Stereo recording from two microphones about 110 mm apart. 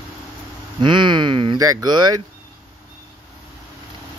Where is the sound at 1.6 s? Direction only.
30° right (ahead or behind).